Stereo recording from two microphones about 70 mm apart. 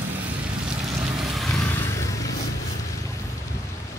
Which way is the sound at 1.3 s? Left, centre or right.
Centre.